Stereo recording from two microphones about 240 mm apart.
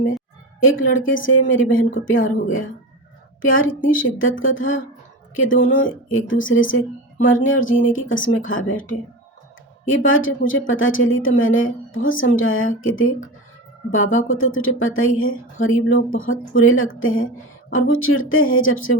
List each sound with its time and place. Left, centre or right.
0.6 s a woman's voice: left
8.7 s speech: left
9.8 s a woman's voice: left